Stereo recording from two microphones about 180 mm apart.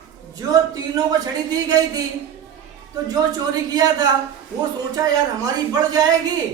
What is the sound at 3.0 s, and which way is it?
Speech, 20° right (ahead or behind).